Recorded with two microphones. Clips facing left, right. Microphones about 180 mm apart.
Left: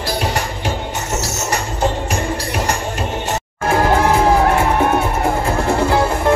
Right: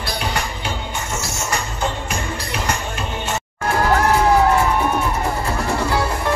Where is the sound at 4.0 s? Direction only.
55° left (ahead or behind).